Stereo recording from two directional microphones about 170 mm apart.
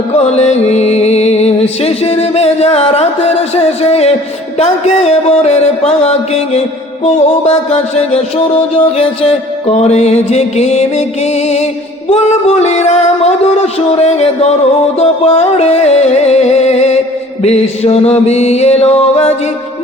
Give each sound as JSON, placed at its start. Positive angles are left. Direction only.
{"t": 0.3, "sound": "music", "side_deg": 40}
{"t": 7.7, "sound": "music", "side_deg": 40}